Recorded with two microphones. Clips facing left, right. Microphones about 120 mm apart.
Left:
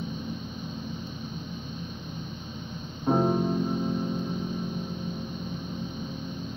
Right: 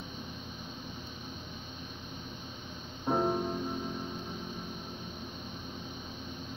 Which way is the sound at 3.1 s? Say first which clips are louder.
Left 5 dB; 20° left (ahead or behind).